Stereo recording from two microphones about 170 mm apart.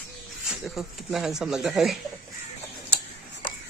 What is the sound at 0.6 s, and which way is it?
Speech, centre (ahead or behind).